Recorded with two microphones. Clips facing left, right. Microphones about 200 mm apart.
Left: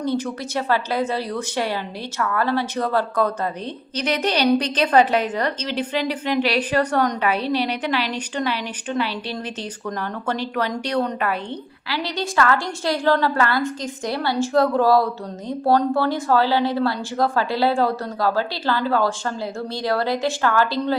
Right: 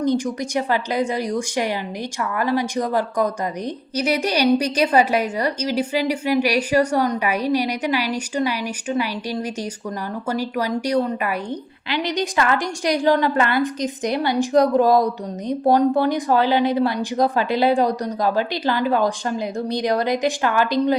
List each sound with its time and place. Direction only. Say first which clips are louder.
0.0 s a woman's voice: right 3 dB; 15° right (ahead or behind)